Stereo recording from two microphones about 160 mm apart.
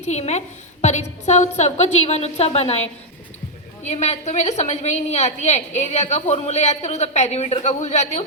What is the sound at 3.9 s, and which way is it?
A woman's voice, 45° left (ahead or behind).